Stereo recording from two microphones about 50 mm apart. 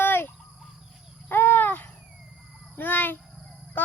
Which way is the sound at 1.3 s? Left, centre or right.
Left.